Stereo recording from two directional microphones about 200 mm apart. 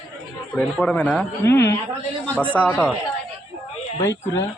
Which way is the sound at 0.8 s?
5° left (ahead or behind).